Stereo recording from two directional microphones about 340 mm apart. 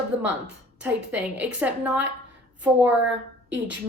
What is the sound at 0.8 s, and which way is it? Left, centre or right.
A woman's voice, centre.